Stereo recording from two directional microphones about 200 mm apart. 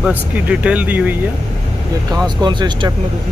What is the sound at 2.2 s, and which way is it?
Speech, 20° right (ahead or behind).